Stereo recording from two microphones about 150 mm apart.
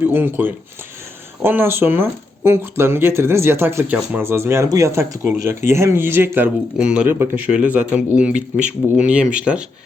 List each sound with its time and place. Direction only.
0.1 s speech: 15° right (ahead or behind)